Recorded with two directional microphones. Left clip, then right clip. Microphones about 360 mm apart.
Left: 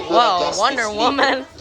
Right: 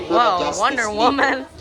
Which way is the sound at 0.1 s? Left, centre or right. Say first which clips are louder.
Left 1 dB; centre.